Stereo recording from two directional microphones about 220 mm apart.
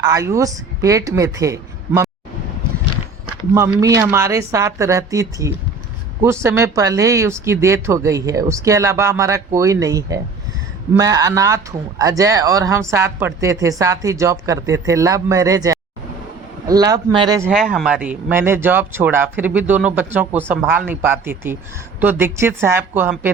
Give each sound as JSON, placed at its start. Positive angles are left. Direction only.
{"t": 0.0, "sound": "speech", "side_deg": -15}
{"t": 3.5, "sound": "speech", "side_deg": -15}
{"t": 17.5, "sound": "speech", "side_deg": 0}